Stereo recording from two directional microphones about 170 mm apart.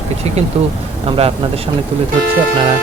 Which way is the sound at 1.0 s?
35° right (ahead or behind).